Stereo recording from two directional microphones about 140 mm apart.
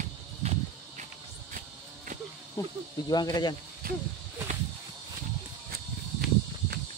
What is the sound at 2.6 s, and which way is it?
Speech, 20° left (ahead or behind).